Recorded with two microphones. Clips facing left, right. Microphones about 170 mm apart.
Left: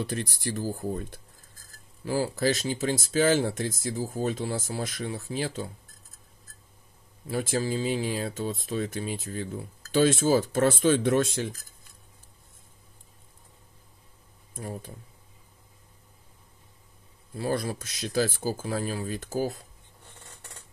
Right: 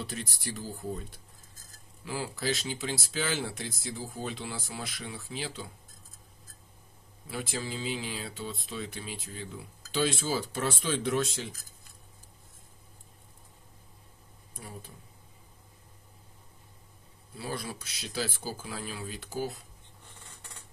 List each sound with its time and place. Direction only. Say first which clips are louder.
0.1 s speech: left 7 dB; 45° left (ahead or behind)
2.0 s speech: left 7 dB; 40° left (ahead or behind)
7.2 s speech: left 8 dB; 45° left (ahead or behind)
14.6 s speech: left 8 dB; 45° left (ahead or behind)
17.4 s speech: left 8 dB; 45° left (ahead or behind)